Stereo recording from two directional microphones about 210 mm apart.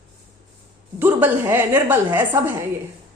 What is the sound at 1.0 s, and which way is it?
A woman's voice, 10° right (ahead or behind).